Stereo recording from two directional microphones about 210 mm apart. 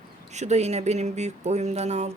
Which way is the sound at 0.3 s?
30° right (ahead or behind).